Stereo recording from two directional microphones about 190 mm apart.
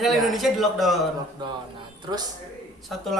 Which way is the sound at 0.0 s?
Centre (ahead or behind).